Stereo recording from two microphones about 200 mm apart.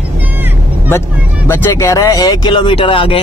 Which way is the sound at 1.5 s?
15° left (ahead or behind).